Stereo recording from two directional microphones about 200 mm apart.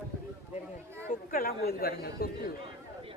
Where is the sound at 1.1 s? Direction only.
45° left (ahead or behind).